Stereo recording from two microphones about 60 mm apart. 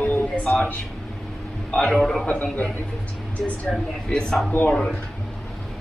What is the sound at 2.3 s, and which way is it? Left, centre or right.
Speech, left.